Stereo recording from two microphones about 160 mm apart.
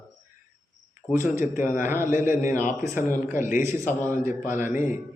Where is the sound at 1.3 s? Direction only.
15° right (ahead or behind).